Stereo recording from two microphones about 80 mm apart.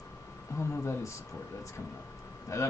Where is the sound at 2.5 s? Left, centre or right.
Left.